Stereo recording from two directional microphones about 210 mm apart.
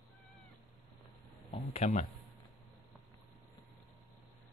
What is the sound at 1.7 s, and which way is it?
Speech, 30° left (ahead or behind).